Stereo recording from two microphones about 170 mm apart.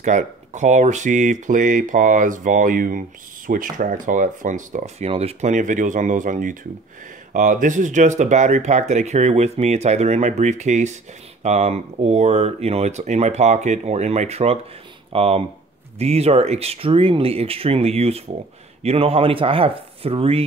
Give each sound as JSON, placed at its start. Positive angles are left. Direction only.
{"t": 0.0, "sound": "speech", "side_deg": -45}